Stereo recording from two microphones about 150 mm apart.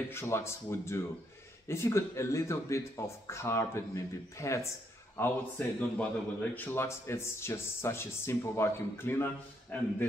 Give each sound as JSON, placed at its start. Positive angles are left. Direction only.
{"t": 0.1, "sound": "speech", "side_deg": 20}